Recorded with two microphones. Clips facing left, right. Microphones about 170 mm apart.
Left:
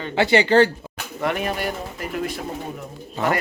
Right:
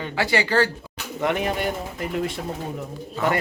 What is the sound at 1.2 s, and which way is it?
Speech, 20° right (ahead or behind).